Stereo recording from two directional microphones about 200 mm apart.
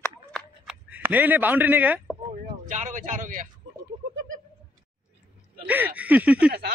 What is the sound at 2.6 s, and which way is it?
Speech, 40° right (ahead or behind).